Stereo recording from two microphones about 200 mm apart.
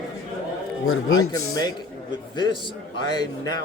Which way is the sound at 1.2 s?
20° left (ahead or behind).